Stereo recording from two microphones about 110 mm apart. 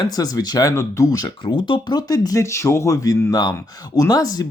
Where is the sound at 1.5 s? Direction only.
50° left (ahead or behind).